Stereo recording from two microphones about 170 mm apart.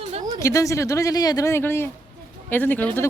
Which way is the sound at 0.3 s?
20° left (ahead or behind).